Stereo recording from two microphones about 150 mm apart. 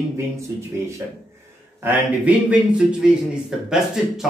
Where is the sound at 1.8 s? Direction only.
10° right (ahead or behind).